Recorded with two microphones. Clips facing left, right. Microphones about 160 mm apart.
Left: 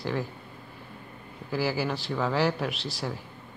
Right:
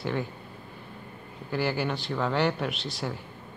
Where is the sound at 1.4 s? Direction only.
Centre (ahead or behind).